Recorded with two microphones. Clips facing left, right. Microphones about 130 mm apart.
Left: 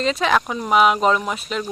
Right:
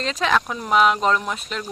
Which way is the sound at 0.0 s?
5° left (ahead or behind).